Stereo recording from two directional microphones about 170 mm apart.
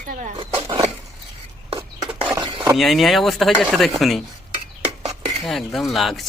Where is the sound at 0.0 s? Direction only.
50° right (ahead or behind).